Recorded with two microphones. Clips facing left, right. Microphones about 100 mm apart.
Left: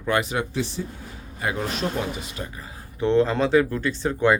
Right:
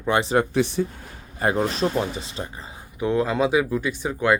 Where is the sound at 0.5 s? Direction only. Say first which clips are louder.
Right 6 dB; 60° right (ahead or behind).